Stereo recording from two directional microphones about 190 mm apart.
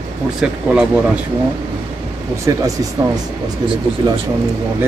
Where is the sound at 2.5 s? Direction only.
20° right (ahead or behind).